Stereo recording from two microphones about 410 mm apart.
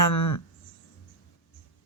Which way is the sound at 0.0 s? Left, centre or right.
Left.